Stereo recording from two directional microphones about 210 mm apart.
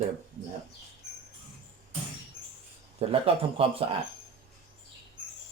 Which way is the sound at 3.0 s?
25° right (ahead or behind).